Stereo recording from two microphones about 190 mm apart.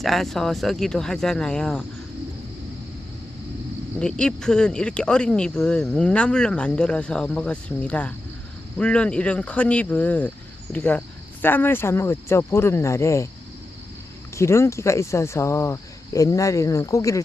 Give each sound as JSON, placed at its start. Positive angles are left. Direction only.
{"t": 0.0, "sound": "speech", "side_deg": 0}
{"t": 4.0, "sound": "speech", "side_deg": 5}
{"t": 14.3, "sound": "speech", "side_deg": 15}